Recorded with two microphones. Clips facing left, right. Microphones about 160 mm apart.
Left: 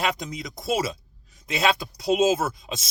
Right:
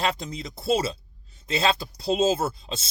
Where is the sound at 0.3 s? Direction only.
30° right (ahead or behind).